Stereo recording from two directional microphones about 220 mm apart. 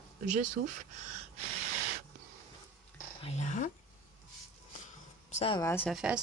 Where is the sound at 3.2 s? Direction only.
30° left (ahead or behind).